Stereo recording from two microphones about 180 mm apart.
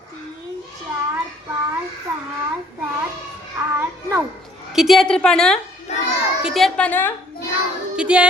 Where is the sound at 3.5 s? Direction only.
15° right (ahead or behind).